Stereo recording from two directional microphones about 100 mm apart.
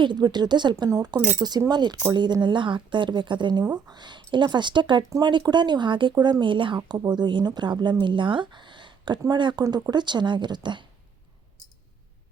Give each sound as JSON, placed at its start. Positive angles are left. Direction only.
{"t": 0.0, "sound": "a woman's voice", "side_deg": -50}
{"t": 0.9, "sound": "a woman's voice", "side_deg": -40}